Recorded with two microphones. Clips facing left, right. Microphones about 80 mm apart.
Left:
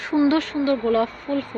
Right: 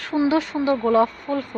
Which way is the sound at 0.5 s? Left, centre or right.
Centre.